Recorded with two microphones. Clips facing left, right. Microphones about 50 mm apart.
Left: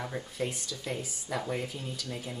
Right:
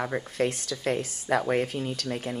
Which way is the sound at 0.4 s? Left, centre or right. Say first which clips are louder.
Right 8 dB; right.